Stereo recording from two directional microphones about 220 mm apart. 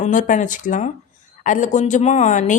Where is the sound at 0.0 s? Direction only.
35° left (ahead or behind).